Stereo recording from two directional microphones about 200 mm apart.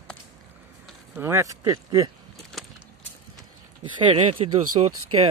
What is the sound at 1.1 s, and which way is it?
Speech, 15° right (ahead or behind).